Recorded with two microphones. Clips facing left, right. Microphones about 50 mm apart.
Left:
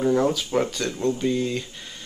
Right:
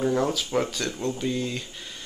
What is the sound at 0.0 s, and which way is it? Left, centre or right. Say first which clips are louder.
Speech: left 3 dB; centre.